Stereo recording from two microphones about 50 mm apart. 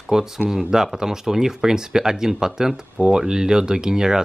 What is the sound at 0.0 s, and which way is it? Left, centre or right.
Speech, centre.